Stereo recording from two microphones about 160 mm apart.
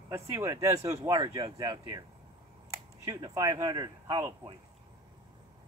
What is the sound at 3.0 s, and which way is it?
Speech, 20° right (ahead or behind).